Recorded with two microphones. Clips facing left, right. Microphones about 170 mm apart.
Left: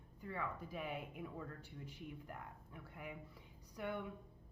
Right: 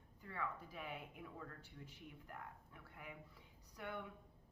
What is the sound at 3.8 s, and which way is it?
Speech, 20° left (ahead or behind).